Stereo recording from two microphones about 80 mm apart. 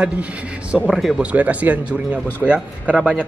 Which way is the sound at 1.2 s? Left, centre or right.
Centre.